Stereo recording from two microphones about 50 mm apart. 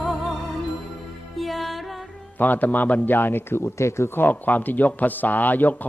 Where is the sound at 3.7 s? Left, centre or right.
Left.